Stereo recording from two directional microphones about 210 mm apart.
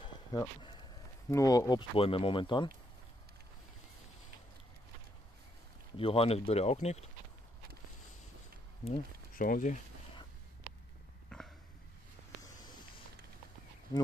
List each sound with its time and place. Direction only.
0.0 s a sound: 20° left (ahead or behind)
1.3 s speech: 15° left (ahead or behind)
5.9 s speech: 25° left (ahead or behind)
8.8 s speech: 40° left (ahead or behind)
11.2 s burping: 5° left (ahead or behind)
12.5 s a sound: 20° left (ahead or behind)
13.9 s speech: 20° left (ahead or behind)